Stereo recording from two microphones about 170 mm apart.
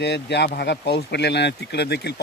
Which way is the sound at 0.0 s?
85° left.